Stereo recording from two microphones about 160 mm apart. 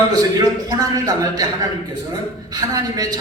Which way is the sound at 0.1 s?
25° right (ahead or behind).